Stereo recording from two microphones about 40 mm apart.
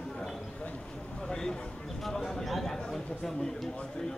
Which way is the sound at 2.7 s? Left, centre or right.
Centre.